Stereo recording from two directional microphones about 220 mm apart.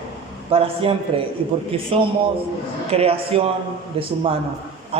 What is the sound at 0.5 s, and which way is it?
A man's voice, 25° right (ahead or behind).